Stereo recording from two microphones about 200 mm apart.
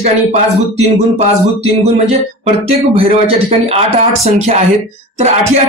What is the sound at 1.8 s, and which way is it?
Speech, 30° right (ahead or behind).